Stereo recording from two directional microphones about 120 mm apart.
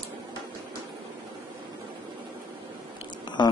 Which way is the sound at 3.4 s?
40° left (ahead or behind).